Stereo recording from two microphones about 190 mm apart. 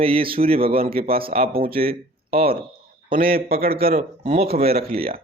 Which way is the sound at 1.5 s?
50° right (ahead or behind).